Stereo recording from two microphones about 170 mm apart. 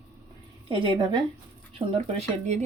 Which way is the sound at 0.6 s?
30° right (ahead or behind).